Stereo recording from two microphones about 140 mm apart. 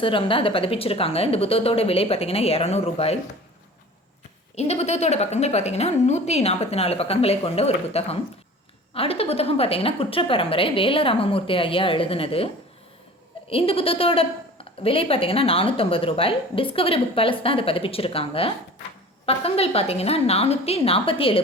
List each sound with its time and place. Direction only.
0.0 s a woman's voice: 40° left (ahead or behind)
4.5 s a woman's voice: 50° left (ahead or behind)
13.5 s a woman's voice: 40° left (ahead or behind)